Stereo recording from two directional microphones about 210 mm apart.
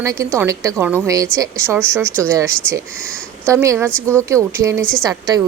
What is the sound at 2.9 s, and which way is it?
Speech, 5° left (ahead or behind).